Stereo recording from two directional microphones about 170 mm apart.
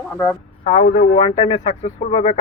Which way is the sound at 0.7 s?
55° left (ahead or behind).